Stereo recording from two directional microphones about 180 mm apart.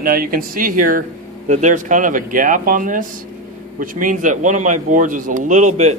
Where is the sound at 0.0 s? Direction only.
55° right (ahead or behind).